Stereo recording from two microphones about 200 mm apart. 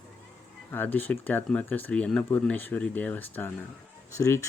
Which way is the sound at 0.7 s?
10° left (ahead or behind).